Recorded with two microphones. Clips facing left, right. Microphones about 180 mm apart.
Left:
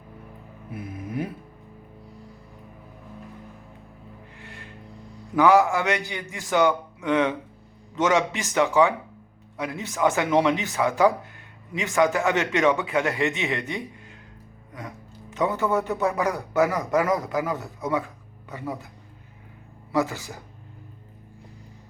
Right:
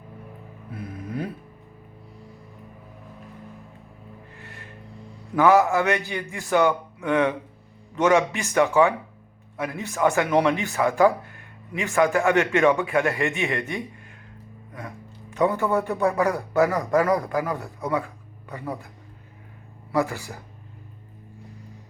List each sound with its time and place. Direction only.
0.7 s speech: 20° left (ahead or behind)
4.4 s music: 15° left (ahead or behind)
5.3 s a man's voice: 15° left (ahead or behind)
19.9 s speech: 20° left (ahead or behind)